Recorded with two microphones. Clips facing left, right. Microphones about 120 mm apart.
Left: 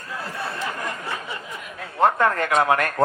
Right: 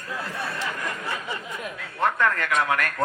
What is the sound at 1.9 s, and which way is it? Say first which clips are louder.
A man's voice: left 5 dB; 35° left (ahead or behind).